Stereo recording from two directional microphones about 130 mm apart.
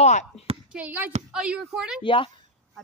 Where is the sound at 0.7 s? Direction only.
10° right (ahead or behind).